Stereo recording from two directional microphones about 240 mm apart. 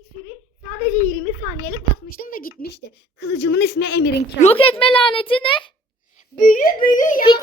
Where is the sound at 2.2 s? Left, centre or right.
Left.